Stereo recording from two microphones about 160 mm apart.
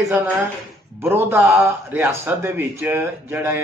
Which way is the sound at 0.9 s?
15° right (ahead or behind).